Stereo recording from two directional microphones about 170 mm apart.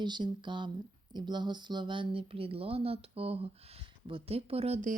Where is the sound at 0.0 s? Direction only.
25° right (ahead or behind).